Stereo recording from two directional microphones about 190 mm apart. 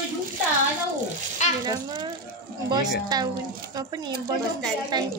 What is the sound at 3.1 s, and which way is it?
Speech, 20° right (ahead or behind).